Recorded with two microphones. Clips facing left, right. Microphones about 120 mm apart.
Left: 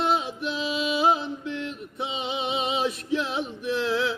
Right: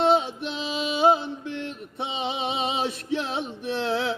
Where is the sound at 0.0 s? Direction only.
30° right (ahead or behind).